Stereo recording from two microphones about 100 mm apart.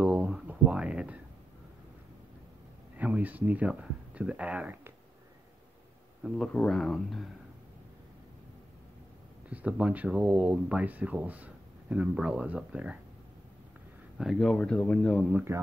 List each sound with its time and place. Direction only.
0.0 s a sound: 15° right (ahead or behind)
3.0 s speech: 15° right (ahead or behind)
6.2 s speech: 5° left (ahead or behind)
9.5 s speech: 15° right (ahead or behind)
14.1 s a man's voice: centre (ahead or behind)
15.5 s speech: 25° right (ahead or behind)